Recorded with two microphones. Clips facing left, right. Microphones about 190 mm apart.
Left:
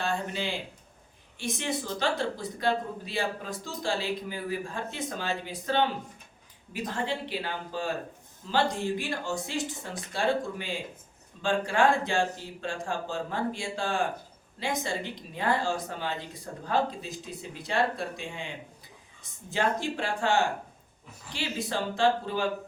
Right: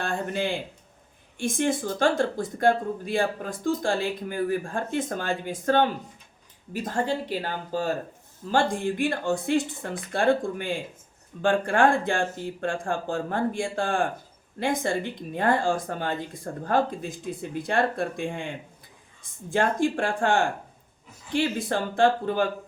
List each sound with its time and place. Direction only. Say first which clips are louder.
0.0 s speech: right 3 dB; 55° right (ahead or behind)